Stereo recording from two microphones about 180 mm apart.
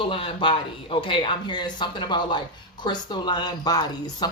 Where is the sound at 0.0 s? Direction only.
30° left (ahead or behind).